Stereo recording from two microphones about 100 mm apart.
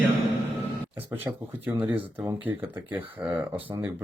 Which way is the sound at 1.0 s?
20° right (ahead or behind).